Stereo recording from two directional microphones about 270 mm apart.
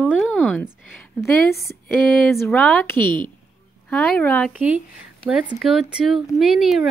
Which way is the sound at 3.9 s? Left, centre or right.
Centre.